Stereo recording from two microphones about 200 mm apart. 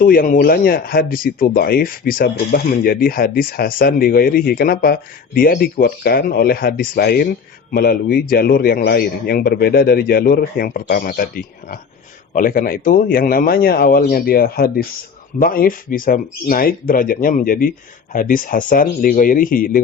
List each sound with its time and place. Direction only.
0.0 s speech: 45° left (ahead or behind)